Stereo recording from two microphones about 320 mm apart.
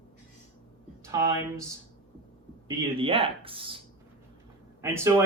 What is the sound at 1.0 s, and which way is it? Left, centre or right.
Speech, centre.